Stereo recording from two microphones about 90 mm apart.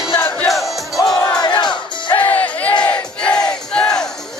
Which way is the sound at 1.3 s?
55° left (ahead or behind).